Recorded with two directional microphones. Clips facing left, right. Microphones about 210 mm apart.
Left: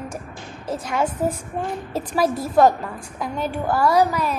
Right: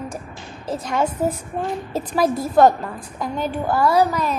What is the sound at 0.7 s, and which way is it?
A woman's voice, 5° left (ahead or behind).